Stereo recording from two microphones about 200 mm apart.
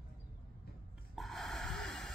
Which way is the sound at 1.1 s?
Centre (ahead or behind).